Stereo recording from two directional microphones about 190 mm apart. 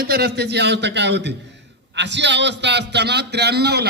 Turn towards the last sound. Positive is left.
turn(degrees=-60)  # may be behind; listen again after turning